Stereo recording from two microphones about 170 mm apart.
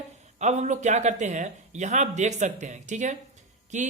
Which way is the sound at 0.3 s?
45° right (ahead or behind).